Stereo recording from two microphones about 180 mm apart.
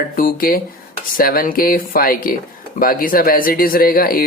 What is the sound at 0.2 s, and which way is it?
Speech, 50° left (ahead or behind).